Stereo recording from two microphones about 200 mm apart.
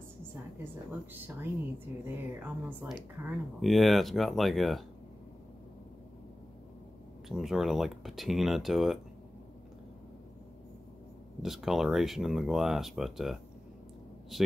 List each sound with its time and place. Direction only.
2.0 s speech: 10° right (ahead or behind)
7.2 s speech: centre (ahead or behind)
11.4 s speech: centre (ahead or behind)